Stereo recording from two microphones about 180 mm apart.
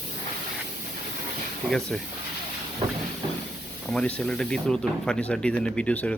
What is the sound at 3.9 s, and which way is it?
Speech, 5° left (ahead or behind).